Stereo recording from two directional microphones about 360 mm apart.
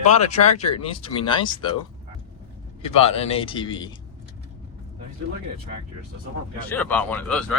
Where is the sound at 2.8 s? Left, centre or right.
Centre.